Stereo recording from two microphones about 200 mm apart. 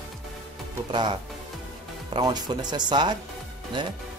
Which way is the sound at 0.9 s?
25° right (ahead or behind).